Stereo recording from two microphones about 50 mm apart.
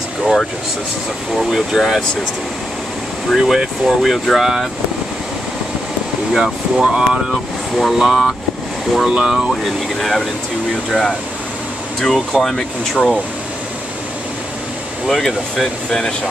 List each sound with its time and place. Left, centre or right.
1.3 s speech: centre
3.3 s speech: centre
6.3 s speech: centre
7.2 s speech: centre
9.9 s speech: centre
12.9 s speech: centre
15.0 s speech: centre